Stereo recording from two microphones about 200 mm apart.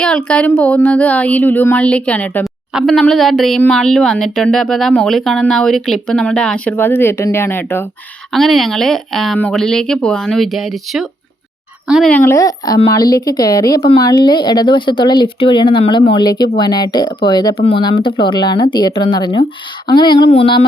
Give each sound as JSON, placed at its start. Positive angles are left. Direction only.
{"t": 0.3, "sound": "speech", "side_deg": 5}
{"t": 8.3, "sound": "a woman's voice", "side_deg": 0}